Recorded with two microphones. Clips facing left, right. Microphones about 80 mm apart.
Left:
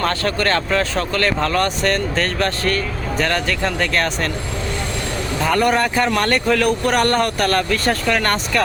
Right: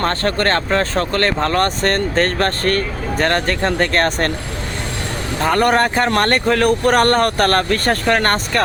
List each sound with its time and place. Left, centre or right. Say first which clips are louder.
0.0 s speech: right 2 dB; right
5.4 s speech: right 2 dB; right